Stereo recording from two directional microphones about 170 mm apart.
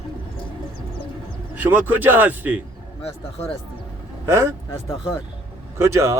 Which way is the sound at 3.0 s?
35° left (ahead or behind).